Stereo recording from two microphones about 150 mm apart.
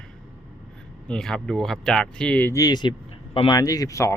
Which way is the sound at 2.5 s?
25° left (ahead or behind).